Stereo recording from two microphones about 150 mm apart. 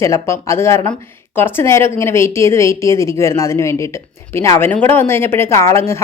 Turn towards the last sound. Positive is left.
turn(degrees=20)  # may be behind; listen again after turning